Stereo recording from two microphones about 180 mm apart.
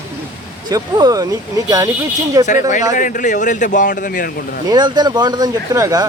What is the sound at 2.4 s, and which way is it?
Speech, 45° left (ahead or behind).